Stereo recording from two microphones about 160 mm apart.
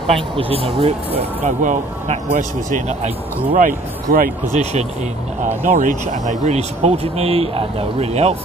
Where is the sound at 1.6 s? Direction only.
55° right (ahead or behind).